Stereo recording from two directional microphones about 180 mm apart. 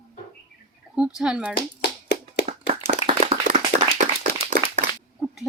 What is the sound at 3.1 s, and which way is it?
Clapping, 35° right (ahead or behind).